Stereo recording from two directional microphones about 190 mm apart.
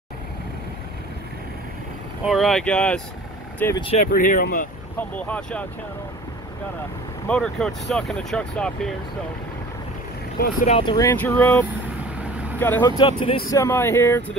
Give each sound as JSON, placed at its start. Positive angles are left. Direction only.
{"t": 2.2, "sound": "speech", "side_deg": 0}
{"t": 3.7, "sound": "speech", "side_deg": 30}
{"t": 4.0, "sound": "speech", "side_deg": 45}
{"t": 4.9, "sound": "speech", "side_deg": 5}
{"t": 7.2, "sound": "speech", "side_deg": 5}
{"t": 10.4, "sound": "speech", "side_deg": 40}
{"t": 10.8, "sound": "speech", "side_deg": 20}
{"t": 13.0, "sound": "speech", "side_deg": 30}
{"t": 13.5, "sound": "speech", "side_deg": 15}